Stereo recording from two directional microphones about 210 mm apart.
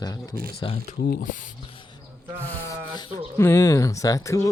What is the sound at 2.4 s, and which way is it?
Rub, 10° left (ahead or behind).